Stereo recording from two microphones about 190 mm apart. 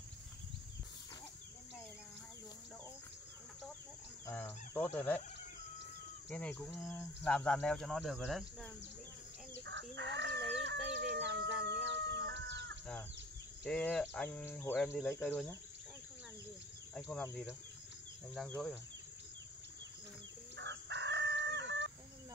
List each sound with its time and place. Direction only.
4.3 s fowl: 10° left (ahead or behind)
6.2 s speech: 5° left (ahead or behind)
9.7 s chicken: 70° right (ahead or behind)
13.7 s cricket: 5° left (ahead or behind)
15.2 s speech: centre (ahead or behind)
16.9 s cricket: 10° left (ahead or behind)
20.5 s chicken: 70° right (ahead or behind)